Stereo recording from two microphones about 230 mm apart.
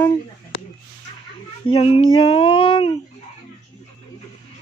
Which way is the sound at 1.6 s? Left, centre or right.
Left.